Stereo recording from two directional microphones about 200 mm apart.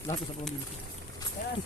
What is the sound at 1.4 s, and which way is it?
Speech, 40° left (ahead or behind).